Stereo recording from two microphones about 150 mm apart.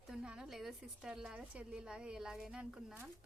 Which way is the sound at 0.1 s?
5° right (ahead or behind).